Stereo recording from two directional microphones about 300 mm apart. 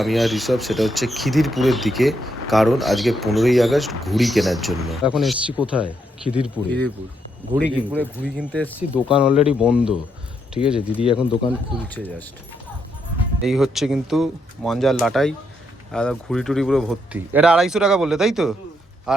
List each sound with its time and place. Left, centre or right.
0.0 s speech: centre
10.9 s speech: centre
13.4 s speech: centre